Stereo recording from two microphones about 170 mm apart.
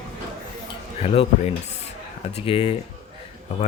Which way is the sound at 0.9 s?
35° left (ahead or behind).